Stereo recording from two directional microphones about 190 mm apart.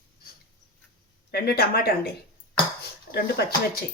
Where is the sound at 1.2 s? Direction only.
55° left (ahead or behind).